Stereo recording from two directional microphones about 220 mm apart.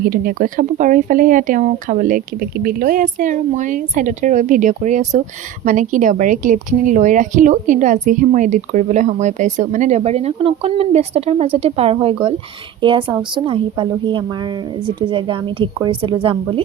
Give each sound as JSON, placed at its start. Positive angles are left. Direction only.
{"t": 0.0, "sound": "a woman's voice", "side_deg": -40}